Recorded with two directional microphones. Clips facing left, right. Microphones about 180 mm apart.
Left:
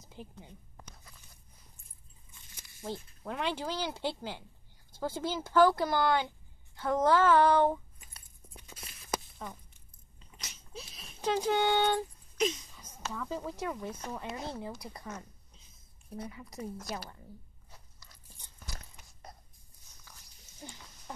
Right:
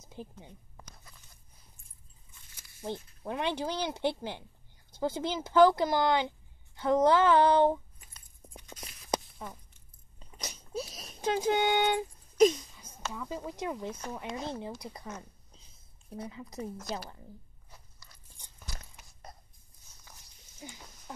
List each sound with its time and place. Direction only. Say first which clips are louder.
0.0 s speech: right 3 dB; 20° right (ahead or behind)
2.8 s speech: right 2 dB; 20° right (ahead or behind)
8.7 s a sound: right 3 dB; centre (ahead or behind)
10.4 s wheeze: right 10 dB; 40° right (ahead or behind)
11.1 s speech: right 1 dB; 15° right (ahead or behind)
12.4 s speech: right 9 dB; 35° right (ahead or behind)
12.8 s speech: left 1 dB; 10° right (ahead or behind)
16.1 s speech: right 1 dB; 25° right (ahead or behind)
20.6 s speech: right 1 dB; 5° right (ahead or behind)